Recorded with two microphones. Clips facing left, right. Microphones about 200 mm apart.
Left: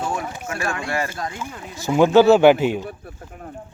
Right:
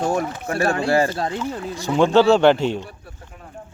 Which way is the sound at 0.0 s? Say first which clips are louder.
Right 5 dB; 45° right (ahead or behind).